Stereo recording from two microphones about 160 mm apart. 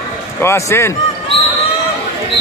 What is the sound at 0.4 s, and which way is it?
Speech, 15° left (ahead or behind).